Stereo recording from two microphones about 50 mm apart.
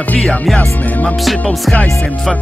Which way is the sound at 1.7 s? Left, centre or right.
Centre.